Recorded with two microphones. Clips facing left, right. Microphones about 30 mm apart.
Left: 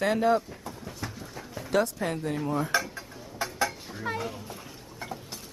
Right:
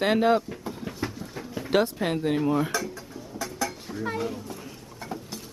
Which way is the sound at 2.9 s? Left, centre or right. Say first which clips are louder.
Even; left.